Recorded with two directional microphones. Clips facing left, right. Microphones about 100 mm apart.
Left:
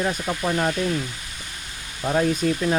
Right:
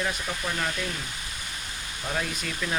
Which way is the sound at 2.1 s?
40° left (ahead or behind).